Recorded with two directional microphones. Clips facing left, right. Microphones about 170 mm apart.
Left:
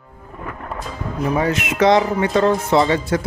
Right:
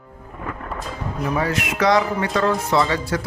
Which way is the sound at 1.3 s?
20° left (ahead or behind).